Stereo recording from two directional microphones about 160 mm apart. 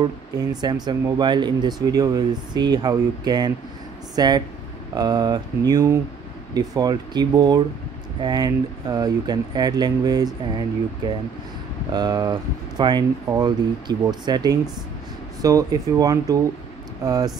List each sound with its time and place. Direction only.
0.0 s speech: 25° right (ahead or behind)